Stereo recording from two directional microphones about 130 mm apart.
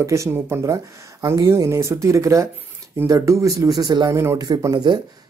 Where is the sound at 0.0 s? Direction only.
20° right (ahead or behind).